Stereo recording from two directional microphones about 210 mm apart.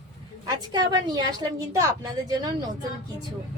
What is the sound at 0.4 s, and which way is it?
A woman's voice, 20° right (ahead or behind).